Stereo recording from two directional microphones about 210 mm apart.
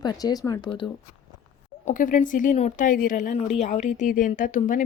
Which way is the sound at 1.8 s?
35° left (ahead or behind).